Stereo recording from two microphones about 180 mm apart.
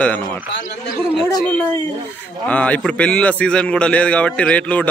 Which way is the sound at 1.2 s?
10° left (ahead or behind).